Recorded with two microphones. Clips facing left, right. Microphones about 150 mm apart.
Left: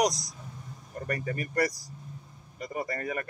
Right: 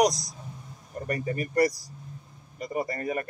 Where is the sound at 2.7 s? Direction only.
30° right (ahead or behind).